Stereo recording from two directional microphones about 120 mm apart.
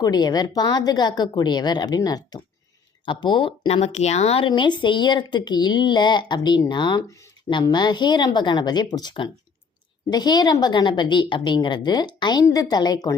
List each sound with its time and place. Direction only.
0.0 s a woman's voice: 35° left (ahead or behind)
3.7 s speech: 65° left (ahead or behind)
4.4 s a woman's voice: 40° left (ahead or behind)